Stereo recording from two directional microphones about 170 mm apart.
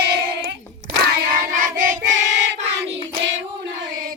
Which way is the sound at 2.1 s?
90° right.